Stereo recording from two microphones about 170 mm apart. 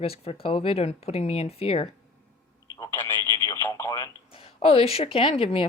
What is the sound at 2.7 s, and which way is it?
Speech, 15° left (ahead or behind).